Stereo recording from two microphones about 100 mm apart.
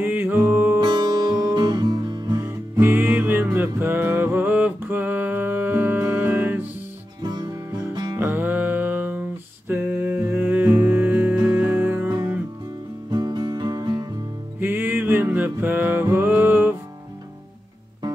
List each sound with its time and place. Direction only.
0.0 s music: 20° right (ahead or behind)
0.7 s music: 45° right (ahead or behind)
2.7 s music: 20° right (ahead or behind)
7.9 s music: 45° right (ahead or behind)
8.2 s music: 20° right (ahead or behind)
9.7 s a sound: 15° right (ahead or behind)
10.2 s music: 20° right (ahead or behind)
13.1 s music: 45° right (ahead or behind)
14.6 s music: 20° right (ahead or behind)